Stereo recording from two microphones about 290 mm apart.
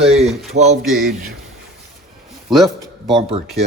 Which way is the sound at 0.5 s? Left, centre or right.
Right.